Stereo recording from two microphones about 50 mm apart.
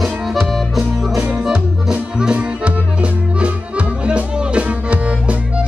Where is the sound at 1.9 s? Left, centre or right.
Centre.